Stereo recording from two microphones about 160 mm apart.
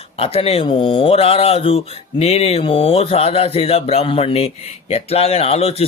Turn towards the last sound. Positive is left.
turn(degrees=40)  # may be behind; listen again after turning